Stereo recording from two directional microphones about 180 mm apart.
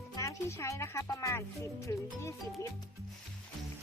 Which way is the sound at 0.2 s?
15° left (ahead or behind).